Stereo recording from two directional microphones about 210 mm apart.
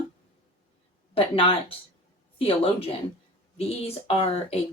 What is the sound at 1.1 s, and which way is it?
Speech, 25° left (ahead or behind).